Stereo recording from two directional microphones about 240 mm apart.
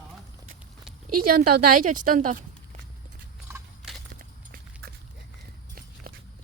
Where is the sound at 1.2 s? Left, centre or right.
Right.